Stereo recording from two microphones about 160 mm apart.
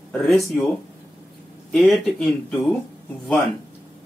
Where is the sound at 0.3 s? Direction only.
Centre (ahead or behind).